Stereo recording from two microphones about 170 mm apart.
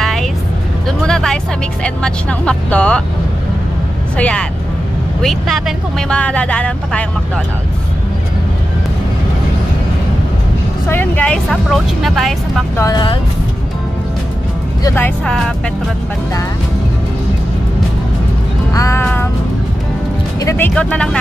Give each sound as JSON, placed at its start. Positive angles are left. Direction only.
{"t": 0.0, "sound": "vehicle", "side_deg": 0}
{"t": 0.8, "sound": "speech", "side_deg": 5}
{"t": 4.2, "sound": "speech", "side_deg": 5}
{"t": 10.9, "sound": "speech", "side_deg": 10}
{"t": 12.7, "sound": "speech", "side_deg": 20}
{"t": 14.8, "sound": "speech", "side_deg": 15}
{"t": 18.7, "sound": "music", "side_deg": 20}
{"t": 20.3, "sound": "speech", "side_deg": 15}